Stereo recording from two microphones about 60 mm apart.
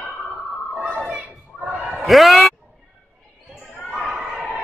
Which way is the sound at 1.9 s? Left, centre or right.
Centre.